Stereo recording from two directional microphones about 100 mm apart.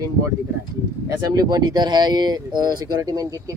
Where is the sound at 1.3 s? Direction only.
40° right (ahead or behind).